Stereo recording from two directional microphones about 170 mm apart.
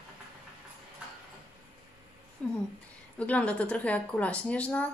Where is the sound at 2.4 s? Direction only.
5° left (ahead or behind).